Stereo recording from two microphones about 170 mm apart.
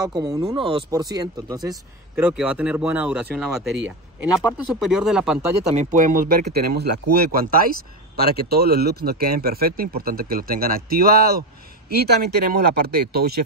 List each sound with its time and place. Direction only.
0.2 s speech: 20° right (ahead or behind)
2.1 s speech: 10° right (ahead or behind)
5.8 s speech: 45° right (ahead or behind); by 13.4 s 70° right (ahead or behind)